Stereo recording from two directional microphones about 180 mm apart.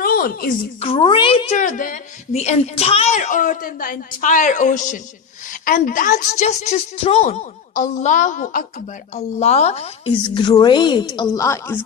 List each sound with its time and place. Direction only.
0.0 s a sound: 55° left (ahead or behind)
0.7 s a woman's voice: 35° left (ahead or behind)
7.7 s a woman's voice: 45° left (ahead or behind)
10.2 s a woman's voice: 25° left (ahead or behind)